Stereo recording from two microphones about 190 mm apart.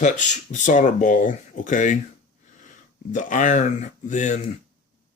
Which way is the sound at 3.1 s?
40° left (ahead or behind).